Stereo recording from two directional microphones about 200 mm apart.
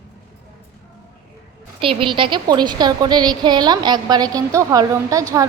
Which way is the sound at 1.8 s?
25° right (ahead or behind).